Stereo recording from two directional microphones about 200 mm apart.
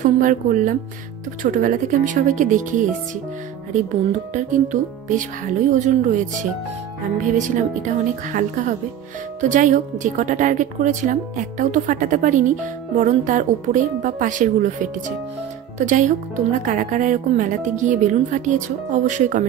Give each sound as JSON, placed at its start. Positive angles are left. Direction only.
{"t": 0.0, "sound": "a woman's voice", "side_deg": -40}
{"t": 4.3, "sound": "a woman's voice", "side_deg": -40}
{"t": 5.7, "sound": "a woman's voice", "side_deg": -40}